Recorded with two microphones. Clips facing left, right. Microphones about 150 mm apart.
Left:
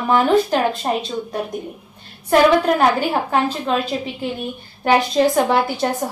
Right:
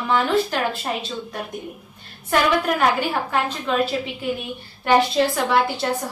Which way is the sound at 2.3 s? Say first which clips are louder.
Left 6 dB; 35° left (ahead or behind).